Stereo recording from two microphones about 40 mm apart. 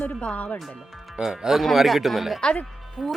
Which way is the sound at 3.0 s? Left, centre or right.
Centre.